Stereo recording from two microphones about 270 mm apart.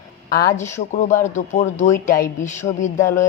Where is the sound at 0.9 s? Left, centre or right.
Left.